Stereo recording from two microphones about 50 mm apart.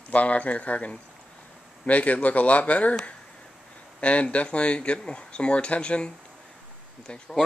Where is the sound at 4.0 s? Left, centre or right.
Left.